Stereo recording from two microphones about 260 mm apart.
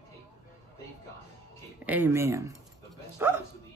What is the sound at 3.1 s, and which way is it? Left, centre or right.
Speech, centre.